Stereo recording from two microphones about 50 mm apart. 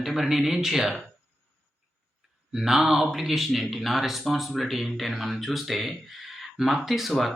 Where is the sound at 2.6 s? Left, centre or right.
Centre.